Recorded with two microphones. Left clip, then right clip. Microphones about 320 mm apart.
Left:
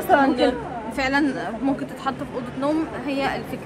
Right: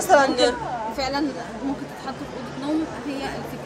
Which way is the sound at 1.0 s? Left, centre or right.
Left.